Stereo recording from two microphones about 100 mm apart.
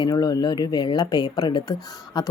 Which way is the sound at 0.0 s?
40° left (ahead or behind).